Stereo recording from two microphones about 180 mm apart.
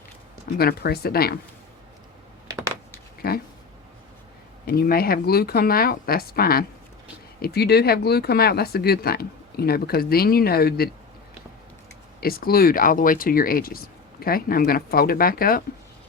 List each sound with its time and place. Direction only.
0.6 s speech: 60° left (ahead or behind)
2.5 s a sound: 20° right (ahead or behind)
4.6 s speech: 60° left (ahead or behind)
12.2 s speech: 55° left (ahead or behind)